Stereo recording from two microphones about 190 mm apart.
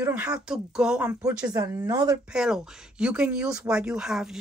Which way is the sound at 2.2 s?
5° right (ahead or behind).